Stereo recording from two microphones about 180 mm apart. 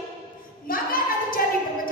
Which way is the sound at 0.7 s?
50° left (ahead or behind).